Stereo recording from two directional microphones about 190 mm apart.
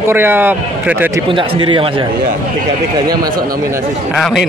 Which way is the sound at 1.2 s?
25° right (ahead or behind).